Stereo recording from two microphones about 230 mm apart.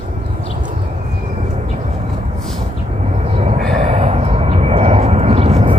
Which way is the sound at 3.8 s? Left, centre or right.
Right.